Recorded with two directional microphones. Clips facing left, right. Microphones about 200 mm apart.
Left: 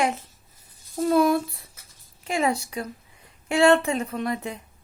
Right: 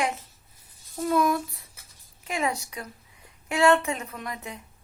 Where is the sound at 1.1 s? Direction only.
30° left (ahead or behind).